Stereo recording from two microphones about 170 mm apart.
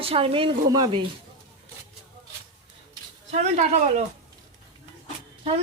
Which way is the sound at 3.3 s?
40° right (ahead or behind).